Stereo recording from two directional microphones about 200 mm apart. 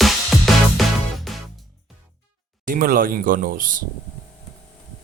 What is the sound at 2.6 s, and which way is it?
Speech, 45° right (ahead or behind).